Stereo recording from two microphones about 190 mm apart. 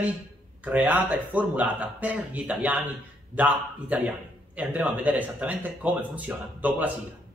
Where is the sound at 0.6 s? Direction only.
10° right (ahead or behind).